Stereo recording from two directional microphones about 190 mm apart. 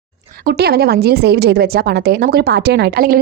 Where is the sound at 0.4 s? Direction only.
55° right (ahead or behind).